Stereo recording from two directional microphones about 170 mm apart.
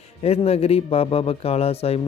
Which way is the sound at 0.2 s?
35° left (ahead or behind).